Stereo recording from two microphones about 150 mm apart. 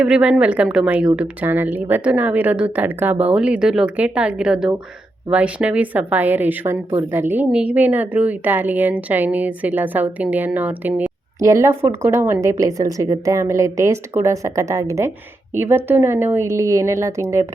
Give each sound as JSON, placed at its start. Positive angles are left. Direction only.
{"t": 0.0, "sound": "a woman's voice", "side_deg": -5}